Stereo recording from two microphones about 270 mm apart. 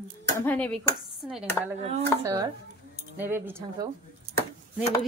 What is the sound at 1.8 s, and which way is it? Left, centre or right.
Speech, right.